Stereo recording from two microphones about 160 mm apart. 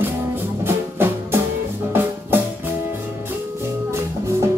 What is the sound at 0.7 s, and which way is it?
Music, 15° right (ahead or behind).